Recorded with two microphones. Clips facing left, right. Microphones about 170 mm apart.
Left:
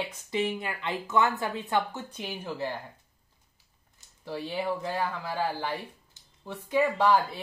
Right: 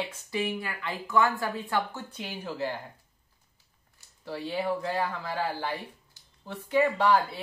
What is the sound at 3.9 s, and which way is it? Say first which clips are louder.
Speech: left 1 dB; 15° left (ahead or behind).